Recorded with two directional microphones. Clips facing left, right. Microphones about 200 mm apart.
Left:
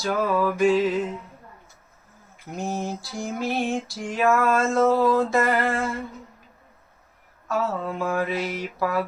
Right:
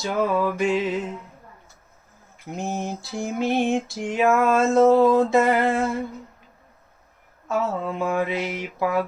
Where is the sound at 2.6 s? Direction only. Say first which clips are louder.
Even; 20° right (ahead or behind).